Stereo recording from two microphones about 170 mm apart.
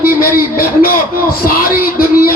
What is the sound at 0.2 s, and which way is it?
Speech, 55° left (ahead or behind).